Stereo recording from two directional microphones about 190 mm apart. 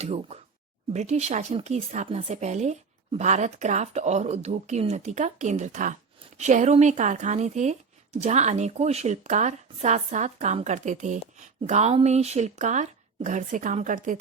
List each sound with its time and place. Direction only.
0.0 s speech: 35° right (ahead or behind)